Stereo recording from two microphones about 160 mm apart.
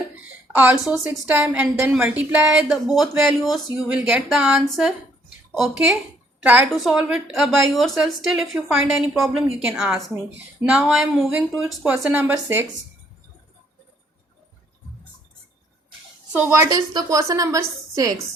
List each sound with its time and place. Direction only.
0.5 s a woman's voice: 10° right (ahead or behind)
16.3 s a woman's voice: 15° right (ahead or behind)